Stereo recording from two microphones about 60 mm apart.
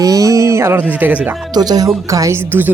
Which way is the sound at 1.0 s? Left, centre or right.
Right.